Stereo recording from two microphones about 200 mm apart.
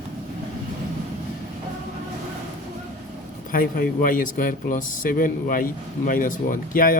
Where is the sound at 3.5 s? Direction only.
45° left (ahead or behind).